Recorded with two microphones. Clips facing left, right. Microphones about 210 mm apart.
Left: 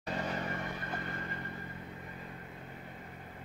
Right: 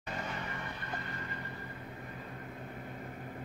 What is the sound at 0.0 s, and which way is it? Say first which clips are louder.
Vehicle: left 4 dB; 35° left (ahead or behind).